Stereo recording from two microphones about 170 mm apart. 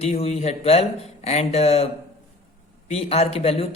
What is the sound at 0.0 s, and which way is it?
A man's voice, 40° left (ahead or behind).